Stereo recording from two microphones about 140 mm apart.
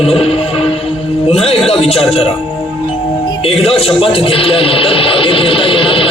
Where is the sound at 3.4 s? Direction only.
45° left (ahead or behind).